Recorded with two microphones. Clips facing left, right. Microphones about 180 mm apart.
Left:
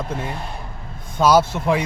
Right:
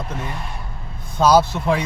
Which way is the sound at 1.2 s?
10° left (ahead or behind).